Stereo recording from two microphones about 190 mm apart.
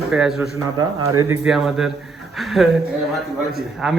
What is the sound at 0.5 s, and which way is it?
Speech, 20° right (ahead or behind).